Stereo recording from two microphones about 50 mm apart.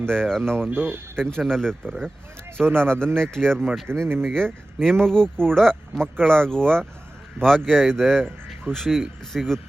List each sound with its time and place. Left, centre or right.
0.1 s speech: centre
0.7 s speech: right
1.2 s speech: centre
2.6 s speech: right
3.2 s speech: centre
3.9 s speech: right
4.3 s speech: centre